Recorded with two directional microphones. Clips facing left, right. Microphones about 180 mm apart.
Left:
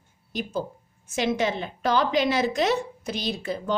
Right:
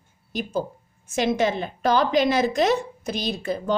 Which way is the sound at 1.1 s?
45° right (ahead or behind).